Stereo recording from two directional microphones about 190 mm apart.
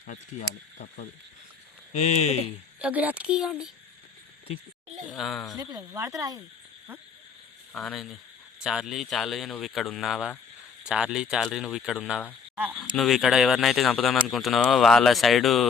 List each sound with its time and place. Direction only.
0.0 s speech: 40° left (ahead or behind)
2.7 s speech: 5° right (ahead or behind)
5.1 s speech: centre (ahead or behind)
5.5 s speech: 15° right (ahead or behind)
7.7 s speech: 5° left (ahead or behind)